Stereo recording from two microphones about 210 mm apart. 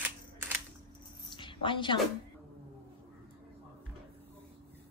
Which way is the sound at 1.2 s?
25° left (ahead or behind).